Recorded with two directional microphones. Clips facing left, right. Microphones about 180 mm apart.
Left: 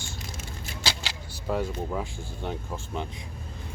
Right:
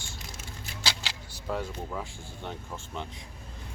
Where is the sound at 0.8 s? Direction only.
Centre (ahead or behind).